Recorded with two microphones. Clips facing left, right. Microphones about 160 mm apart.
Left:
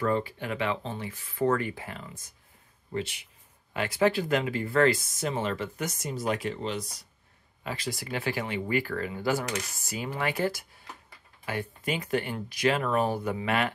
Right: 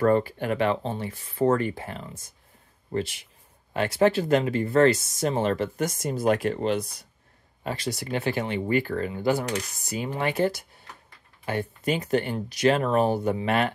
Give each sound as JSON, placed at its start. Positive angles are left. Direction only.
{"t": 0.0, "sound": "speech", "side_deg": -50}
{"t": 5.4, "sound": "speech", "side_deg": -45}
{"t": 7.6, "sound": "speech", "side_deg": -35}
{"t": 11.4, "sound": "speech", "side_deg": -35}
{"t": 12.8, "sound": "speech", "side_deg": -30}